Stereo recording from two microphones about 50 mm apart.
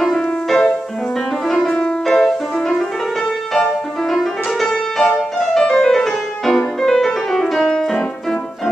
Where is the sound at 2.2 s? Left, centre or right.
Centre.